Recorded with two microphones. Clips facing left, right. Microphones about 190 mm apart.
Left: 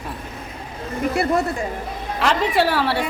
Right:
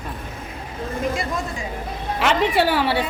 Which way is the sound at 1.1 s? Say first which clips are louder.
Left 6 dB; 65° left (ahead or behind).